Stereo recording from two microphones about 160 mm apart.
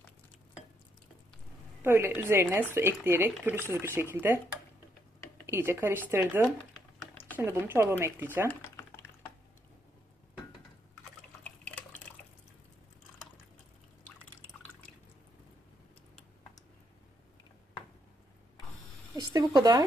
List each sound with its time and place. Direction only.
1.8 s speech: 15° right (ahead or behind)
5.5 s speech: 15° right (ahead or behind)
6.4 s typing: 5° left (ahead or behind)
7.3 s speech: 15° right (ahead or behind)
8.4 s typing: 15° left (ahead or behind)
11.4 s water: 10° left (ahead or behind)
19.1 s a sound: 25° right (ahead or behind)